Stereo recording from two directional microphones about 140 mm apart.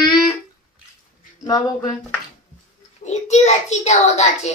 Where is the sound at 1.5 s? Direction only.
30° left (ahead or behind).